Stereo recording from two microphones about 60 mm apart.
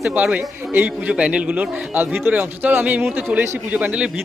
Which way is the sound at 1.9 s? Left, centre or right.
Right.